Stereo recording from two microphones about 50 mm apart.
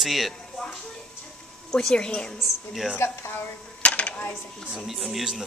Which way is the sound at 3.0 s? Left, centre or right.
Left.